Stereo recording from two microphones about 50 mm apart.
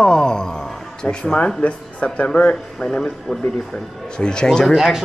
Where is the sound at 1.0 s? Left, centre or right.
Left.